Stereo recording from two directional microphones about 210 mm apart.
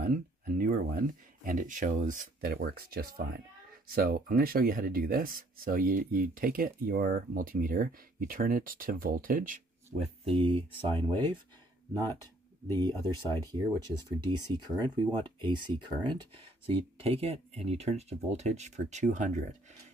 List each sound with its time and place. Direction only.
0.0 s speech: 40° right (ahead or behind)
9.9 s speech: 30° right (ahead or behind)
12.6 s speech: 10° left (ahead or behind)
13.5 s speech: 20° right (ahead or behind); by 19.4 s 35° right (ahead or behind)